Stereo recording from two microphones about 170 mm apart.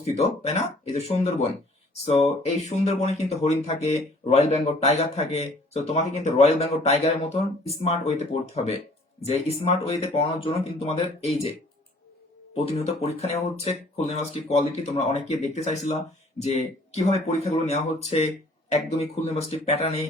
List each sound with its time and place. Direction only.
0.0 s speech: 40° left (ahead or behind)
12.5 s speech: 40° left (ahead or behind)